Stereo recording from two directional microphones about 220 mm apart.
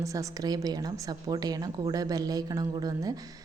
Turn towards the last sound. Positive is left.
turn(degrees=-15)  # may be behind; listen again after turning